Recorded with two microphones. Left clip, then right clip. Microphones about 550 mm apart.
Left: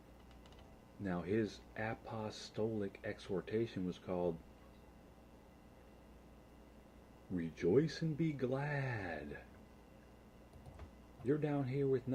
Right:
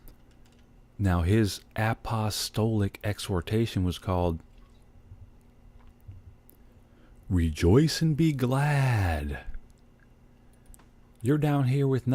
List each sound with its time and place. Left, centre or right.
1.0 s speech: right
7.3 s speech: right
11.3 s speech: right